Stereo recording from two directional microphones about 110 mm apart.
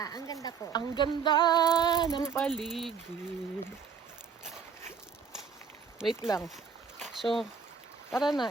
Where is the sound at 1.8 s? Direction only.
40° left (ahead or behind).